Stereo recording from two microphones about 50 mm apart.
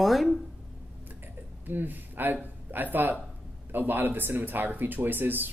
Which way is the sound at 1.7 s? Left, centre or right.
Right.